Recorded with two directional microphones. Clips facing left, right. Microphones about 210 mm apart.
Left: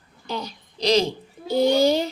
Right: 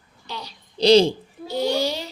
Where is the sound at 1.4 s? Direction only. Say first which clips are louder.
Left 5 dB; 50° left (ahead or behind).